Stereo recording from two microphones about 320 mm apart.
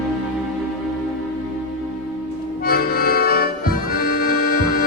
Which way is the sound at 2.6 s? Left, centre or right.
Left.